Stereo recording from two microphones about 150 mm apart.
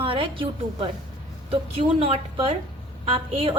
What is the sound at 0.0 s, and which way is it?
Speech, 35° right (ahead or behind).